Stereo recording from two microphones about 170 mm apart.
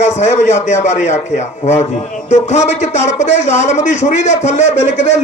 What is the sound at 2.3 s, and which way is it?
Speech, 45° left (ahead or behind).